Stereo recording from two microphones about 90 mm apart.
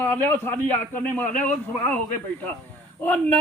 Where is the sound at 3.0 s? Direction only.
20° left (ahead or behind).